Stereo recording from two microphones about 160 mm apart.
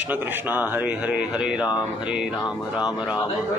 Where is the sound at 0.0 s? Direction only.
10° right (ahead or behind).